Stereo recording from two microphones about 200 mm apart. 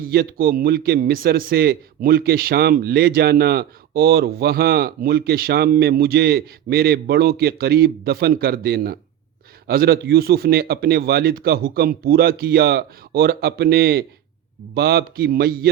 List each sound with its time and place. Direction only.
0.0 s a man's voice: 50° right (ahead or behind)